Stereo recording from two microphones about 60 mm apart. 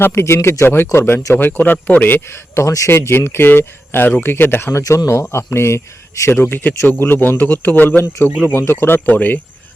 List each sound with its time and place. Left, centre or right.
0.0 s speech: left
2.6 s speech: left
2.9 s speech: left
4.8 s a man's voice: left
5.0 s speech: left
6.3 s speech: left
9.0 s speech: left